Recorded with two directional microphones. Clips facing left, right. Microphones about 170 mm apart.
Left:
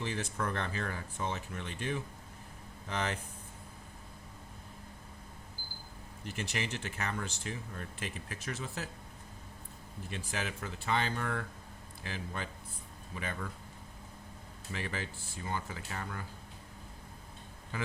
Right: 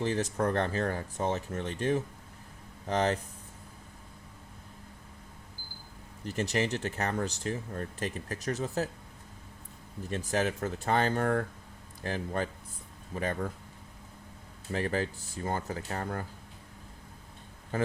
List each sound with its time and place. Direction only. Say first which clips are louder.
0.0 s speech: right 7 dB; 40° right (ahead or behind)
6.2 s speech: right 8 dB; 40° right (ahead or behind)
10.1 s speech: right 9 dB; 40° right (ahead or behind)
14.7 s speech: right 9 dB; 45° right (ahead or behind)
17.7 s a man's voice: right 9 dB; 40° right (ahead or behind)